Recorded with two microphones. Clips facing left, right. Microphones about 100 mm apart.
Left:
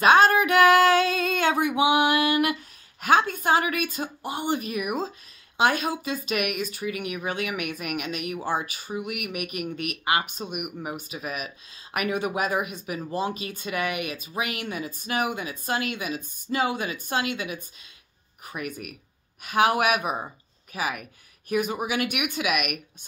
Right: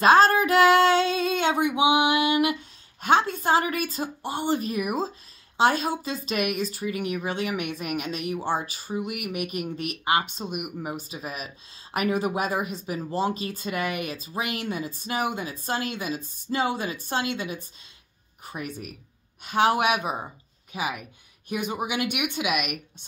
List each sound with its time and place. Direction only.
0.0 s female singing: 35° right (ahead or behind)
1.8 s music: 20° right (ahead or behind)
3.0 s speech: 30° right (ahead or behind)